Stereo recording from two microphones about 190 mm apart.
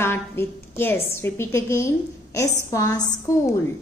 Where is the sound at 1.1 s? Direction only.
15° left (ahead or behind).